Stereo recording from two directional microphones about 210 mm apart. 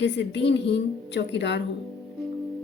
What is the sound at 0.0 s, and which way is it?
Speech, 55° left (ahead or behind).